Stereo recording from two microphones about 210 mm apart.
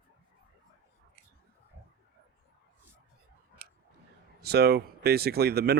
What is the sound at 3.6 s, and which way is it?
Tick-tock, 45° right (ahead or behind).